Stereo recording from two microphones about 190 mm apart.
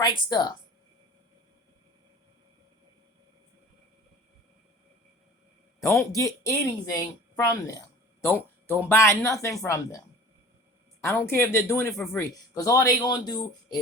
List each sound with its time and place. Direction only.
0.0 s speech: 20° left (ahead or behind)
5.8 s a man's voice: 15° left (ahead or behind)
11.0 s a man's voice: 15° left (ahead or behind)